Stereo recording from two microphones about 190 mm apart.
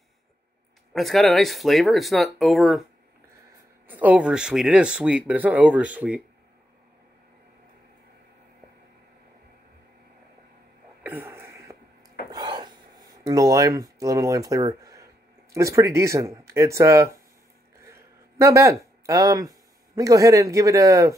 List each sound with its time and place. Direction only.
0.9 s speech: centre (ahead or behind)
3.8 s speech: 10° right (ahead or behind)
11.0 s a sound: 10° right (ahead or behind)
12.3 s gasp: 20° right (ahead or behind)
15.5 s speech: 15° right (ahead or behind)
17.7 s a sound: 15° right (ahead or behind)
20.0 s speech: 15° right (ahead or behind)